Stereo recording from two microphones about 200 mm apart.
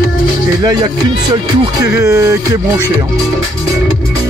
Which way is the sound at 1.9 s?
15° right (ahead or behind).